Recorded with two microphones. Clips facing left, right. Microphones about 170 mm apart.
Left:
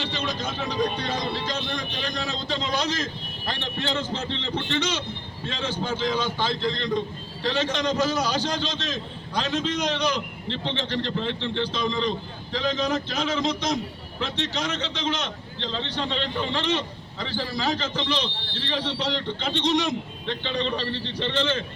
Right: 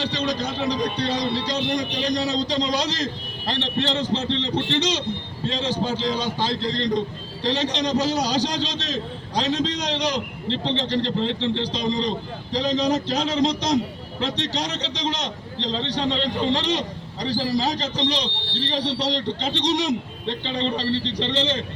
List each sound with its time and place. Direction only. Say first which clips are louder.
0.0 s a man's voice: right 4 dB; 35° right (ahead or behind)